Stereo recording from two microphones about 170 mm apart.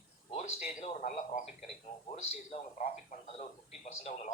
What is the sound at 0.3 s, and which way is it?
A man's voice, 45° left (ahead or behind).